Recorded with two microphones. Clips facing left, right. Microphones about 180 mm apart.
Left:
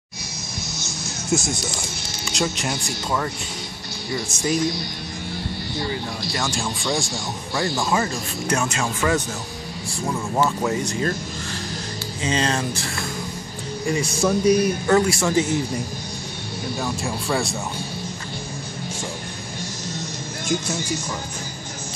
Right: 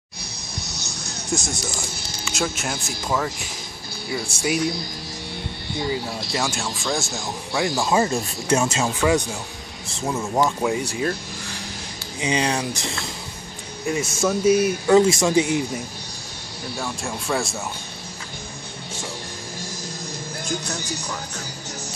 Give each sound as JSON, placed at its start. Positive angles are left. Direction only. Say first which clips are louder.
{"t": 0.7, "sound": "music", "louder": "left 2 dB", "side_deg": -65}
{"t": 1.3, "sound": "speech", "louder": "left 3 dB", "side_deg": 5}
{"t": 5.8, "sound": "speech", "louder": "right 3 dB", "side_deg": -10}
{"t": 7.8, "sound": "speech", "louder": "right 3 dB", "side_deg": -25}
{"t": 12.2, "sound": "speech", "louder": "even", "side_deg": -15}
{"t": 13.8, "sound": "speech", "louder": "left 1 dB", "side_deg": 0}
{"t": 15.0, "sound": "speech", "louder": "right 5 dB", "side_deg": -20}
{"t": 16.8, "sound": "speech", "louder": "left 1 dB", "side_deg": 0}